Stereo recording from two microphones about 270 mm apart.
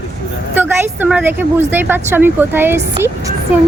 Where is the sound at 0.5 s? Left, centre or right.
Centre.